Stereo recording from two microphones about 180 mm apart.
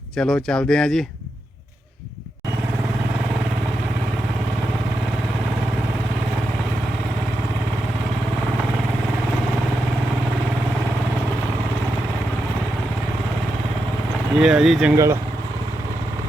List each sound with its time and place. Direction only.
0.2 s speech: 5° left (ahead or behind)
14.3 s speech: 5° right (ahead or behind)
14.9 s speech: 15° right (ahead or behind)